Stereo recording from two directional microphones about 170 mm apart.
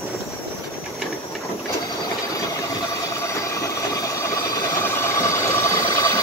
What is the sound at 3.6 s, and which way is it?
Train, 20° left (ahead or behind).